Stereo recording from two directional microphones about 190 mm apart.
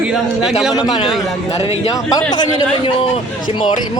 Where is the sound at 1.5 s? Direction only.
30° left (ahead or behind).